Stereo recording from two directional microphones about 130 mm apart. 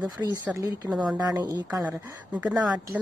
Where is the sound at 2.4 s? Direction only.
5° right (ahead or behind).